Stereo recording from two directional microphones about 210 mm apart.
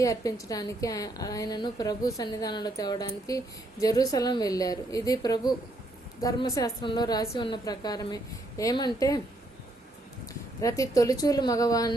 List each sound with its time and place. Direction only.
0.0 s a woman's voice: 15° left (ahead or behind)
10.6 s a woman's voice: 15° left (ahead or behind)